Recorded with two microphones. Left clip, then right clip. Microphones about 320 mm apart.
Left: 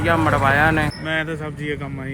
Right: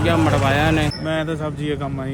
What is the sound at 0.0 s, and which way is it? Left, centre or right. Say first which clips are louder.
Speech: left 1 dB; centre.